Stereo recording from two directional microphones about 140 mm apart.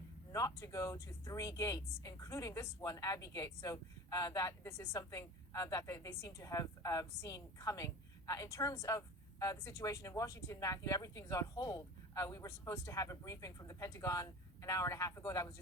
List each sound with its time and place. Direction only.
0.3 s speech: 25° left (ahead or behind)